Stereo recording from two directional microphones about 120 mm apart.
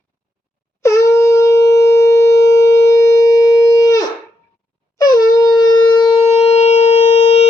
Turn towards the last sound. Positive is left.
turn(degrees=60)  # may be behind; listen again after turning